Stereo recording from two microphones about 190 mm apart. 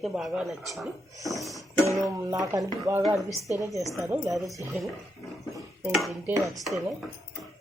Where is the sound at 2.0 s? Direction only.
20° right (ahead or behind).